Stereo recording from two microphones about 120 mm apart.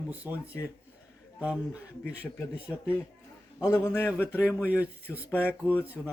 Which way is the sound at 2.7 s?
15° left (ahead or behind).